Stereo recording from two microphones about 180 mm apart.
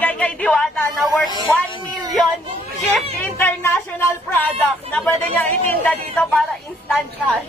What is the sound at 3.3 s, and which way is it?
A man's voice, 15° left (ahead or behind).